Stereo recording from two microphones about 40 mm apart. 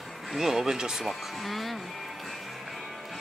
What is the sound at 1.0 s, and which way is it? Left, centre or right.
Speech, centre.